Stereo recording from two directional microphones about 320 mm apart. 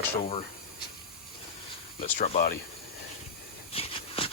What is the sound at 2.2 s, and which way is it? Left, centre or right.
Speech, left.